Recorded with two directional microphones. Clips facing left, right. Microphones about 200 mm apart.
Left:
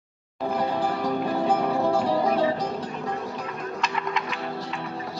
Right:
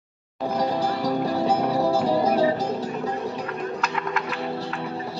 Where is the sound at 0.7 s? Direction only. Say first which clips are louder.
Right 2 dB; 40° right (ahead or behind).